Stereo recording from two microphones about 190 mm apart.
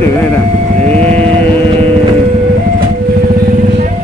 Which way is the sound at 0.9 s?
5° left (ahead or behind).